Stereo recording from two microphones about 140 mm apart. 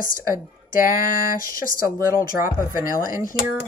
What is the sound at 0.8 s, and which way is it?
Speech, 90° left.